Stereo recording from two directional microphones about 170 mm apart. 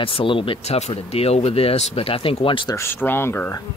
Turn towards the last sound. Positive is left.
turn(degrees=15)  # may be behind; listen again after turning